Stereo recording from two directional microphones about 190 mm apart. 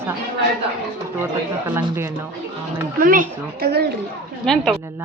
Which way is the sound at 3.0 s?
45° right (ahead or behind).